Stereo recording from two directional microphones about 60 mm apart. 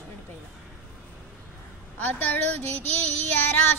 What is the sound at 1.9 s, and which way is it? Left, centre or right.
A woman's voice, left.